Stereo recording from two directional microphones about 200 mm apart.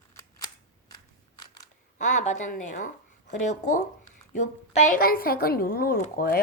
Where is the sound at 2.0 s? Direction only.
40° left (ahead or behind).